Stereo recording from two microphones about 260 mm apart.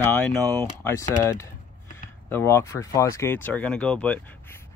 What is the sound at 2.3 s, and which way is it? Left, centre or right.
Speech, centre.